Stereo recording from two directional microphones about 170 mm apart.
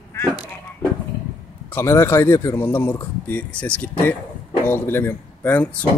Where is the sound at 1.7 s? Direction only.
15° left (ahead or behind).